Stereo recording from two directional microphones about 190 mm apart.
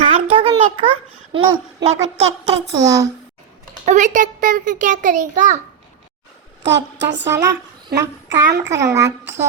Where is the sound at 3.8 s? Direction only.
40° right (ahead or behind).